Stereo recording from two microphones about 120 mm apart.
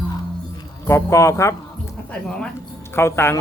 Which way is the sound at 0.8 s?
25° left (ahead or behind).